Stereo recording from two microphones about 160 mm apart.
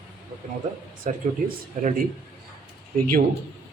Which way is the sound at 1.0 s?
60° right (ahead or behind).